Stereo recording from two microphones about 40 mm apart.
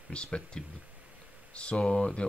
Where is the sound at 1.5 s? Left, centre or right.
Left.